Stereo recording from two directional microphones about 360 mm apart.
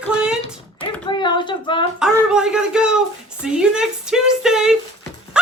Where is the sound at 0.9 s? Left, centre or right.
Centre.